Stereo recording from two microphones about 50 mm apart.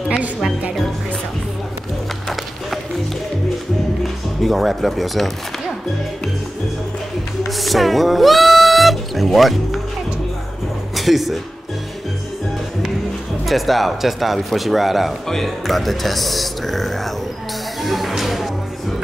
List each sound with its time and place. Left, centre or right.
4.0 s speech: centre
7.4 s speech: centre
11.0 s speech: centre
13.5 s speech: centre
17.8 s music: centre